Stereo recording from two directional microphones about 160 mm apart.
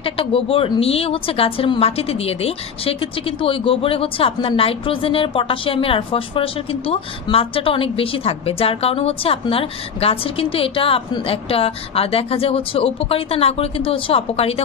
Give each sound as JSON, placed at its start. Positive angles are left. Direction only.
{"t": 0.0, "sound": "a woman's voice", "side_deg": 35}